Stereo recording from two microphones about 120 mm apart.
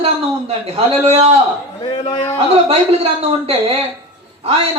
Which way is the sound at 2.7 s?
55° right (ahead or behind).